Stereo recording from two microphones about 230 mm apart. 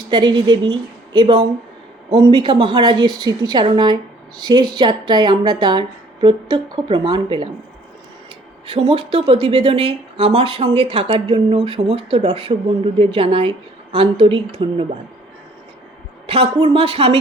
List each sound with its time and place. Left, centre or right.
0.1 s a woman's voice: centre
8.7 s speech: right
16.2 s speech: right